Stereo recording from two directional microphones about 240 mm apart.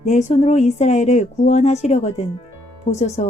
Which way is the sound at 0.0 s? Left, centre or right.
Left.